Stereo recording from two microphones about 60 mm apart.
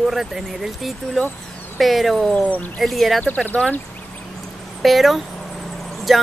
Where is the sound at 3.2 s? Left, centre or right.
Left.